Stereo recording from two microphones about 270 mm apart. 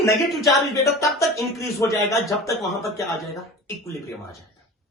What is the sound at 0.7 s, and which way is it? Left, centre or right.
Speech, centre.